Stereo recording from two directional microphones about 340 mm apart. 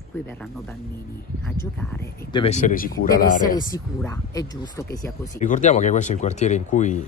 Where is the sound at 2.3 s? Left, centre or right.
Centre.